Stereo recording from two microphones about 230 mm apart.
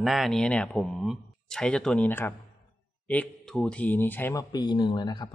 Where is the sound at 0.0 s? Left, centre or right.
Centre.